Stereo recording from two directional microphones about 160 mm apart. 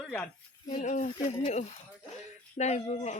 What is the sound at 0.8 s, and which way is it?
Speech, 45° left (ahead or behind).